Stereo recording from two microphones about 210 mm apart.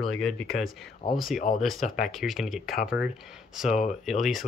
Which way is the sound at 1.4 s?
35° left (ahead or behind).